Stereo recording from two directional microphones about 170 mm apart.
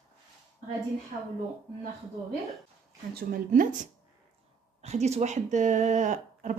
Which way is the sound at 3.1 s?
50° right (ahead or behind).